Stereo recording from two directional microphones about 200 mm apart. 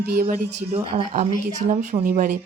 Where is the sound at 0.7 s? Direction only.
30° right (ahead or behind).